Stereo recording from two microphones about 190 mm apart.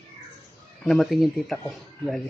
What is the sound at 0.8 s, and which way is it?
Speech, centre (ahead or behind).